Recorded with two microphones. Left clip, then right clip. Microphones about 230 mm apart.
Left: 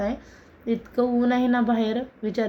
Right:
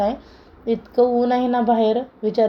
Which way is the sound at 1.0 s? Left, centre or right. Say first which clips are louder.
Right 6 dB; centre.